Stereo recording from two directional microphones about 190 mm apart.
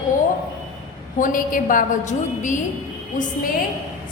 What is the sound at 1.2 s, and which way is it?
A woman's voice, 45° left (ahead or behind).